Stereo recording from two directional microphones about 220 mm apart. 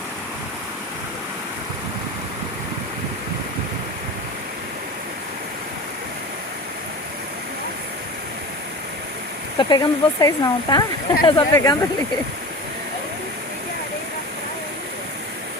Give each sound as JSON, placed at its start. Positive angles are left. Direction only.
{"t": 9.6, "sound": "speech", "side_deg": 20}